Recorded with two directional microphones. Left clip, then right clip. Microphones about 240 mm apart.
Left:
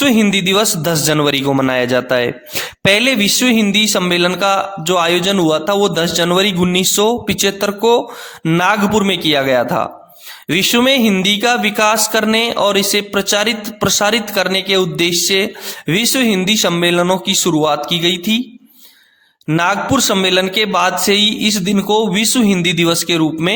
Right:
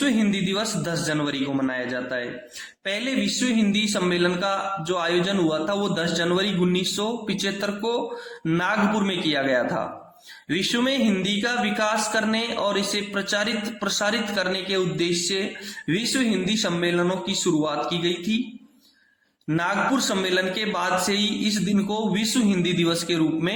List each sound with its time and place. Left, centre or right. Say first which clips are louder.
0.0 s a man's voice: left 11 dB; left
19.5 s a man's voice: left 8 dB; left